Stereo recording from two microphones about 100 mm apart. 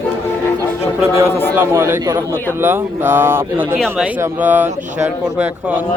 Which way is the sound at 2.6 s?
20° right (ahead or behind).